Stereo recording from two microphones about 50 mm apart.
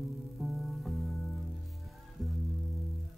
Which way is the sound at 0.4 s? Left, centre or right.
Centre.